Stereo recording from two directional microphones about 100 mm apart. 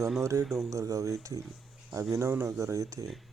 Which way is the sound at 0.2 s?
30° right (ahead or behind).